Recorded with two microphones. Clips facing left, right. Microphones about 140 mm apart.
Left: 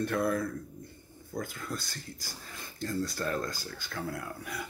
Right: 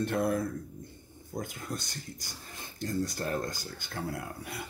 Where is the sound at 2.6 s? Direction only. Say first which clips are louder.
Right 1 dB; 25° right (ahead or behind).